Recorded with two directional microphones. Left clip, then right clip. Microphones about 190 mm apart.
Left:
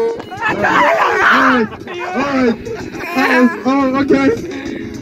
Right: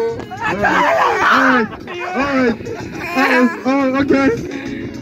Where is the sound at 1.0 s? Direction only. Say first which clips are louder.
Left 2 dB; 50° right (ahead or behind).